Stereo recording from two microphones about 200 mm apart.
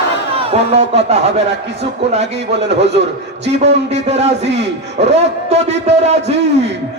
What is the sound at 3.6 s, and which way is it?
A man's voice, 35° right (ahead or behind).